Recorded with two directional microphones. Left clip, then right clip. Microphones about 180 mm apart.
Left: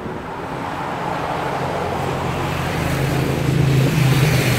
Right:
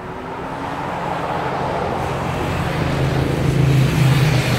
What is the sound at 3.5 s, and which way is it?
Vehicle, 20° left (ahead or behind).